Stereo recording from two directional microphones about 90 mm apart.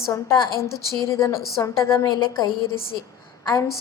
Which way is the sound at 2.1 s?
60° left (ahead or behind).